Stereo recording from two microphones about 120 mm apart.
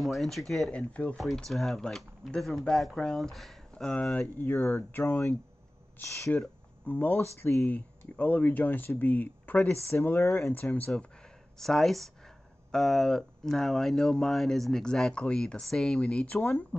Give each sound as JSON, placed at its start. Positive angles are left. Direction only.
{"t": 0.0, "sound": "speech", "side_deg": 0}
{"t": 11.5, "sound": "speech", "side_deg": 5}